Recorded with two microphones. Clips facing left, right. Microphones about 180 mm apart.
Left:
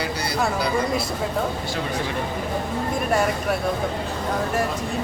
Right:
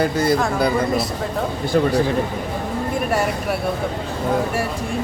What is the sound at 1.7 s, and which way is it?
Speech, 50° right (ahead or behind).